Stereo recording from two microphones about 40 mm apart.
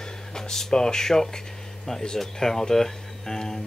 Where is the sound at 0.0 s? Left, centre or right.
Centre.